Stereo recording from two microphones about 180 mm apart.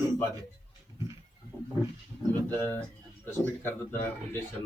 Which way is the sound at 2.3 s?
10° left (ahead or behind).